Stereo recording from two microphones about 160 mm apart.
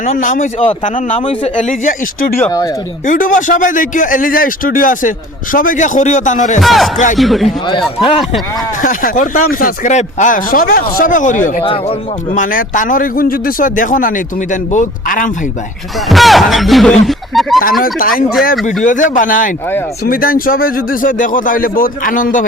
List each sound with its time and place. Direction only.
0.0 s speech: 55° left (ahead or behind)
1.5 s a man's voice: 55° left (ahead or behind)
2.4 s speech: 20° left (ahead or behind)
3.1 s a man's voice: 55° left (ahead or behind)
6.6 s speech: centre (ahead or behind)
7.4 s a man's voice: 35° left (ahead or behind)
8.8 s a man's voice: 55° left (ahead or behind)
11.6 s a man's voice: 35° left (ahead or behind)
12.4 s a man's voice: 55° left (ahead or behind)
16.0 s speech: centre (ahead or behind)
17.8 s a man's voice: 60° left (ahead or behind)